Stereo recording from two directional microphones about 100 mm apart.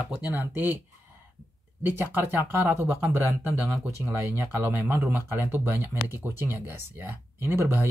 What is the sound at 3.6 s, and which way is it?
Speech, 25° right (ahead or behind).